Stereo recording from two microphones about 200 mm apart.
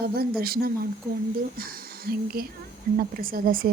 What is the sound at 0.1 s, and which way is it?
Speech, 50° right (ahead or behind).